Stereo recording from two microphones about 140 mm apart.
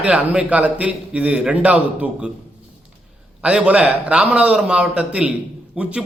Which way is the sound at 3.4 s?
10° right (ahead or behind).